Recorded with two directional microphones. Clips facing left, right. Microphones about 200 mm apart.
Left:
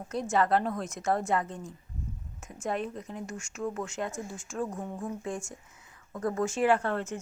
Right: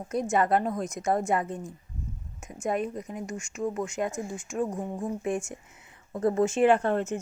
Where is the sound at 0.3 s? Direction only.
20° right (ahead or behind).